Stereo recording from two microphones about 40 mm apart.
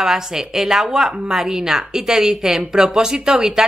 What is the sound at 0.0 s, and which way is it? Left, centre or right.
A woman's voice, centre.